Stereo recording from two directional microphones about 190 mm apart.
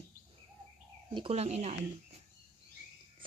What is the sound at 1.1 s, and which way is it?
Speech, 30° right (ahead or behind).